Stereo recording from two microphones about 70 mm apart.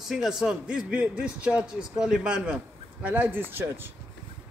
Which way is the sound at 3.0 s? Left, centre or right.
Right.